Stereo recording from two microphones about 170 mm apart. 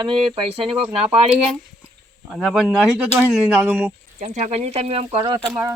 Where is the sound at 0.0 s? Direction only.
30° right (ahead or behind).